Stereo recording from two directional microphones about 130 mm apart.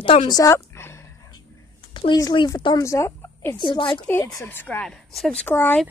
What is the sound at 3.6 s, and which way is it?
Speech, 40° left (ahead or behind).